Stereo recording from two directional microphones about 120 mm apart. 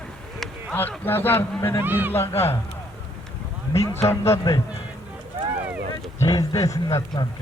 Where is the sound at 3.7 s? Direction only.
25° left (ahead or behind).